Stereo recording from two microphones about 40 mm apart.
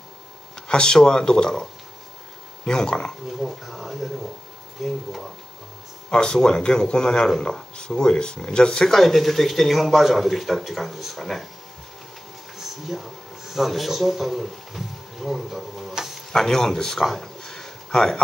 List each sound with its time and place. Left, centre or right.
0.6 s speech: left
3.3 s speech: centre
6.0 s speech: left
8.9 s speech: centre
12.5 s a sound: centre
13.5 s speech: centre
15.9 s a sound: centre
16.3 s speech: centre
17.5 s a sound: centre